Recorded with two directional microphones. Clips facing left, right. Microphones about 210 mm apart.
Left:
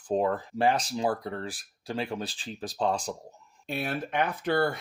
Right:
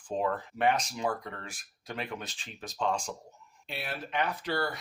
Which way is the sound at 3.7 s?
45° left (ahead or behind).